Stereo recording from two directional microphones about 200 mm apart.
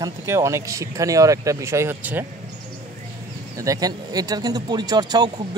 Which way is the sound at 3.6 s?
15° right (ahead or behind).